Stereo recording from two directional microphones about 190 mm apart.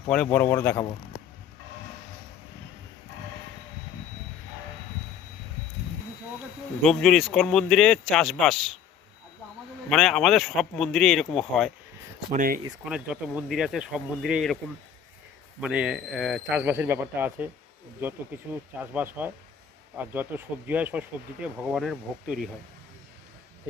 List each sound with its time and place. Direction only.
0.1 s a man's voice: 10° left (ahead or behind)
6.8 s speech: centre (ahead or behind)
9.9 s speech: centre (ahead or behind)
12.3 s speech: 45° right (ahead or behind)
12.8 s speech: 5° right (ahead or behind)
15.6 s speech: 5° right (ahead or behind)
18.8 s speech: 10° right (ahead or behind)
20.3 s speech: 10° right (ahead or behind)